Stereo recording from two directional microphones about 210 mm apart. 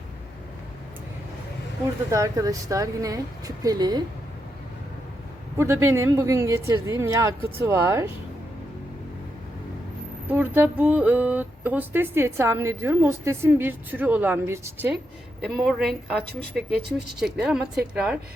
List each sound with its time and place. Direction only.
2.0 s speech: 15° right (ahead or behind)
5.5 s speech: 15° right (ahead or behind)
10.2 s speech: 10° right (ahead or behind)
15.4 s a woman's voice: centre (ahead or behind)